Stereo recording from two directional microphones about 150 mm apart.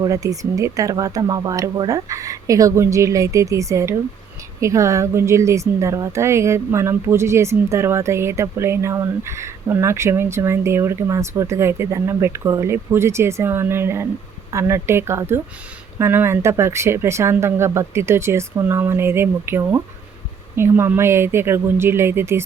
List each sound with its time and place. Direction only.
0.0 s speech: 25° right (ahead or behind)